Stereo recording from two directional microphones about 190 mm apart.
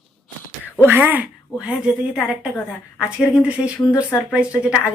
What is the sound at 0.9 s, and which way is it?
A woman's voice, 10° right (ahead or behind).